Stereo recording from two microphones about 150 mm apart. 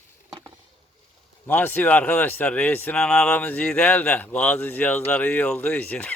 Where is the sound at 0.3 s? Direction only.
25° right (ahead or behind).